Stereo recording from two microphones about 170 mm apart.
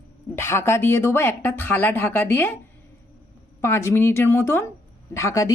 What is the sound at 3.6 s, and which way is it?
Speech, 15° left (ahead or behind).